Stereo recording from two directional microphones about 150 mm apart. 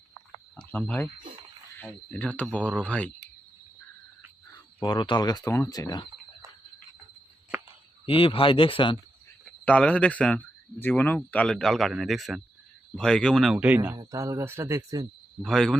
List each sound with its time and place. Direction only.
0.7 s speech: 10° left (ahead or behind)
4.8 s speech: 30° left (ahead or behind)
8.0 s speech: 35° left (ahead or behind)
9.6 s speech: 10° left (ahead or behind); by 13.9 s 10° right (ahead or behind)
13.9 s speech: 25° right (ahead or behind)
15.4 s speech: 5° left (ahead or behind)